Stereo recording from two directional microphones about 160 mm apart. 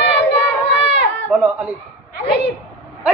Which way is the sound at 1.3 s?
10° right (ahead or behind).